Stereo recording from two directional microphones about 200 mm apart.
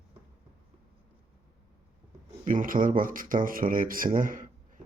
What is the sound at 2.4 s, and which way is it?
Speech, 40° right (ahead or behind).